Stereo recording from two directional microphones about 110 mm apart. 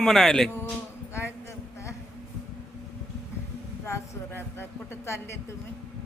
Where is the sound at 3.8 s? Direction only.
25° left (ahead or behind).